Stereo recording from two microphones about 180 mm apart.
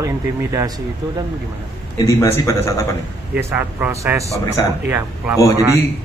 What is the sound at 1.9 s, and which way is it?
Speech, 15° left (ahead or behind).